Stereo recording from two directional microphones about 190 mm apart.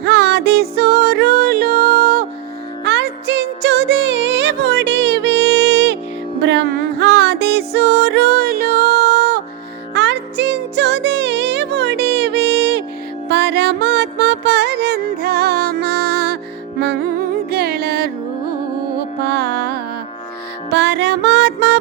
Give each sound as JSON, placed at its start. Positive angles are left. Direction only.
{"t": 0.0, "sound": "music", "side_deg": -60}
{"t": 2.8, "sound": "music", "side_deg": -65}
{"t": 19.3, "sound": "music", "side_deg": -60}